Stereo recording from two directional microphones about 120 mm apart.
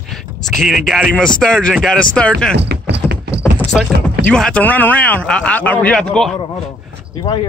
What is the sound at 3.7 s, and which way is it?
Speech, 5° left (ahead or behind).